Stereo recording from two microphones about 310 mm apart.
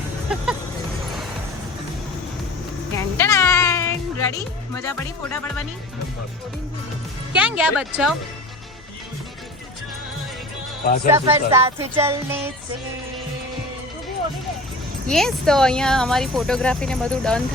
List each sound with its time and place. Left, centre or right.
0.3 s speech: centre
3.2 s music: centre
7.3 s speech: centre
10.8 s speech: left
11.1 s music: centre
15.0 s speech: centre